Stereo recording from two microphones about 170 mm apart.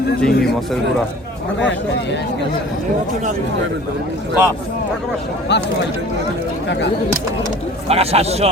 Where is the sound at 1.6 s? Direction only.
90° left.